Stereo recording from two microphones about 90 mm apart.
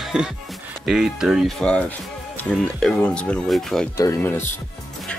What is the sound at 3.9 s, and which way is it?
Speech, 35° left (ahead or behind).